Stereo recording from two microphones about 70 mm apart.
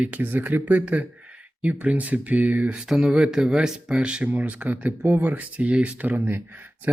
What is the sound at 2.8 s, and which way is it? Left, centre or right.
Speech, centre.